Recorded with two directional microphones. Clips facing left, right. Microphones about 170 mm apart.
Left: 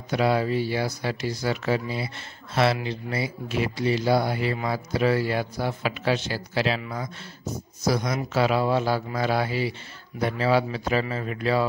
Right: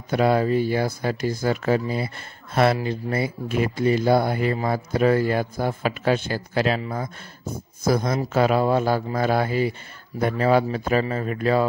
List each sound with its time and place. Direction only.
0.1 s speech: 50° right (ahead or behind)